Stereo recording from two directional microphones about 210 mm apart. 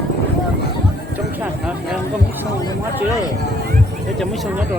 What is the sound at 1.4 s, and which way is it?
Clip-clop, 5° right (ahead or behind).